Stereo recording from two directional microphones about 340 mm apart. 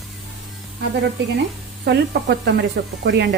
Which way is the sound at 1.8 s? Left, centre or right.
Right.